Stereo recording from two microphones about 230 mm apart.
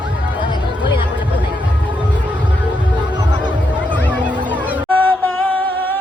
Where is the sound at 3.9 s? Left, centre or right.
Centre.